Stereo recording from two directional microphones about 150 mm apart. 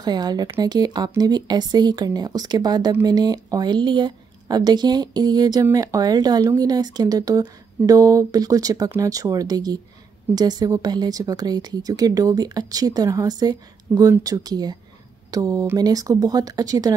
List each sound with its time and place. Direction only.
0.0 s speech: 25° right (ahead or behind)